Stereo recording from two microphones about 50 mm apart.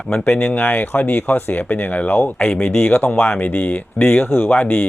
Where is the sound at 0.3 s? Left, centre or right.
Left.